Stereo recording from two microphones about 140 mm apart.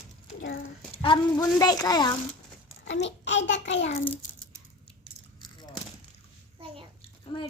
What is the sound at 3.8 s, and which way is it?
Speech, 50° left (ahead or behind).